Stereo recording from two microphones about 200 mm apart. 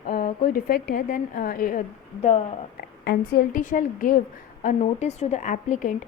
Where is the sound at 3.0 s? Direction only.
50° left (ahead or behind).